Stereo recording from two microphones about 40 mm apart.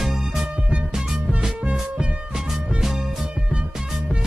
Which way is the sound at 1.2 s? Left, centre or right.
Right.